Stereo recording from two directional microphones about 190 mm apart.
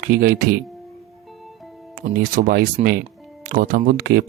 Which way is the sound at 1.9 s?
50° right (ahead or behind).